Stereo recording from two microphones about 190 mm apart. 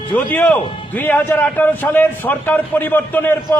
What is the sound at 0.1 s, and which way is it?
A man's voice, 10° left (ahead or behind).